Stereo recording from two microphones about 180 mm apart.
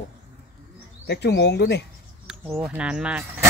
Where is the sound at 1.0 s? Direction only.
70° left (ahead or behind).